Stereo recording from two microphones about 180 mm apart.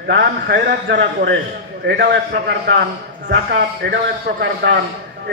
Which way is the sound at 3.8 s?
65° right (ahead or behind).